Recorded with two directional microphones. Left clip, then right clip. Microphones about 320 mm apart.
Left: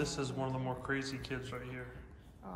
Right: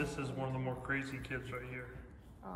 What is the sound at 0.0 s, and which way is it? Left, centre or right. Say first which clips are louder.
A man's voice: left 2 dB; centre.